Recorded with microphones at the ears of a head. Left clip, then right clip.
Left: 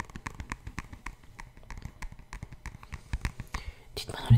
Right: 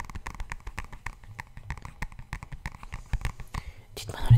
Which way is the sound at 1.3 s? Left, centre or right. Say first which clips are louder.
Right 6 dB; right.